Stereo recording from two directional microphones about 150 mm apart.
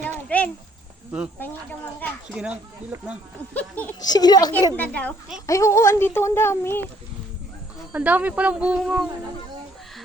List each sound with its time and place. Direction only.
0.0 s a sound: 10° left (ahead or behind)
2.3 s speech: 5° right (ahead or behind)
3.5 s speech: 10° left (ahead or behind)
4.0 s a child's voice: 25° left (ahead or behind)
4.8 s speech: 10° left (ahead or behind)
5.5 s speech: 20° left (ahead or behind)
7.9 s speech: 10° right (ahead or behind)